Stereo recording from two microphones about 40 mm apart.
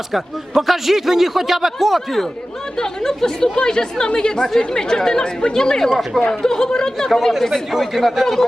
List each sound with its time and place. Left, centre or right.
0.1 s a man's voice: centre
2.7 s speech: centre